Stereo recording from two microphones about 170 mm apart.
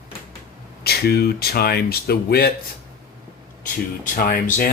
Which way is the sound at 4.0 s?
50° left (ahead or behind).